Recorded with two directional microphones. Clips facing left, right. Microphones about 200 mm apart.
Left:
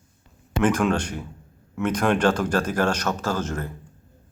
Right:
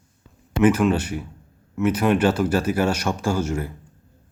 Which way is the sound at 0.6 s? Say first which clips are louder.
Right 4 dB; 5° right (ahead or behind).